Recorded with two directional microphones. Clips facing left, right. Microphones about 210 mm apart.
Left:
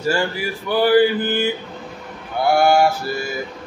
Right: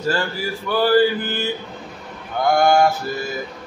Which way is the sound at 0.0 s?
15° left (ahead or behind).